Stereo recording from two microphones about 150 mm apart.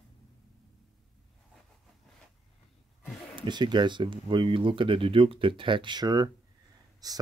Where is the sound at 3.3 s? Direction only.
30° right (ahead or behind).